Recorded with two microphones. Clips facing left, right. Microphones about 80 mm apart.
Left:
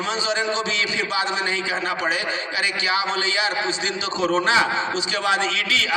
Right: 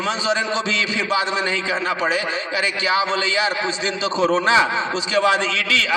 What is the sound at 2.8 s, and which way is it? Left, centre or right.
A man's voice, right.